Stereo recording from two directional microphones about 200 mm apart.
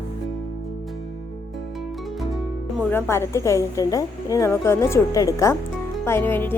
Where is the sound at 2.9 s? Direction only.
10° left (ahead or behind).